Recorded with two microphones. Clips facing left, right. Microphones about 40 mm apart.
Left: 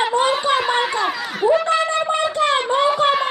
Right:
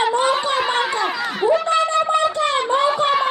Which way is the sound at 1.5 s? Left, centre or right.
Centre.